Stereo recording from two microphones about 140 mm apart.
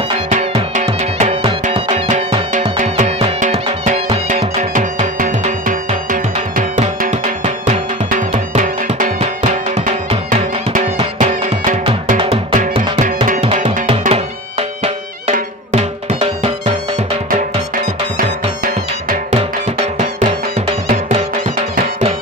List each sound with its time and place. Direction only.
0.8 s music: 45° right (ahead or behind); by 5.8 s 70° right (ahead or behind)
7.0 s music: 65° right (ahead or behind)
11.1 s music: 65° right (ahead or behind)
12.2 s music: 40° right (ahead or behind)
12.5 s music: 60° right (ahead or behind)
15.7 s music: 45° right (ahead or behind)
18.1 s music: 85° right
20.2 s music: 40° right (ahead or behind)